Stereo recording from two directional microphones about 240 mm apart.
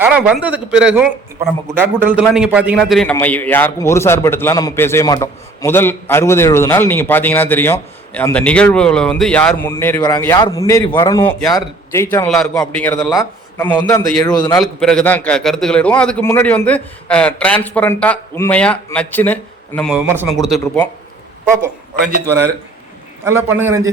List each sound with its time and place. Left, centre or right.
0.0 s a man's voice: centre
12.1 s a man's voice: centre
14.6 s a man's voice: centre
19.9 s a man's voice: centre
23.2 s a man's voice: centre